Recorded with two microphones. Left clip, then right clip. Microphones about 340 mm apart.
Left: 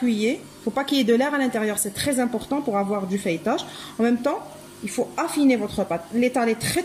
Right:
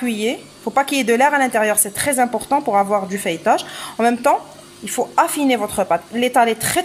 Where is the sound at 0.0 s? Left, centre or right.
Right.